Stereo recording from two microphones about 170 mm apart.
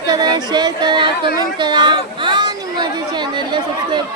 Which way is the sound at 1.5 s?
25° right (ahead or behind).